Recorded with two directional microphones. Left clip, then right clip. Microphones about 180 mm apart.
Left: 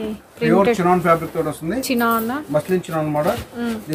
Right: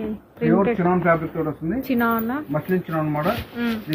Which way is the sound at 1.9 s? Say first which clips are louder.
Left 3 dB; 5° left (ahead or behind).